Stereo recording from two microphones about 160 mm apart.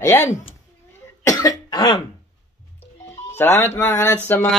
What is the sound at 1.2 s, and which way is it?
Cough, 20° left (ahead or behind).